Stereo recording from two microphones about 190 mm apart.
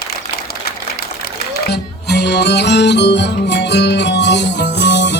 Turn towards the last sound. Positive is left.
turn(degrees=65)  # may be behind; listen again after turning